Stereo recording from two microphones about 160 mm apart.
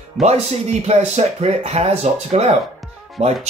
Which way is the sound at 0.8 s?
40° right (ahead or behind).